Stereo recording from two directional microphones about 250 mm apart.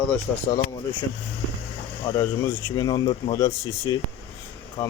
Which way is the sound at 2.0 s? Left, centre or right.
Centre.